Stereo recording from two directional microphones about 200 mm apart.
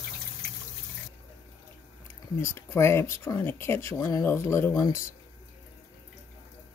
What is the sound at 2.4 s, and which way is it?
Speech, 15° left (ahead or behind).